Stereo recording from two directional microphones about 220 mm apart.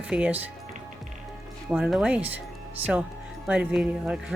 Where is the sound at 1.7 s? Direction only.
5° right (ahead or behind).